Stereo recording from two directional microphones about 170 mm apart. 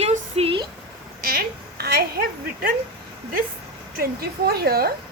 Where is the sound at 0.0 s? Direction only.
40° right (ahead or behind).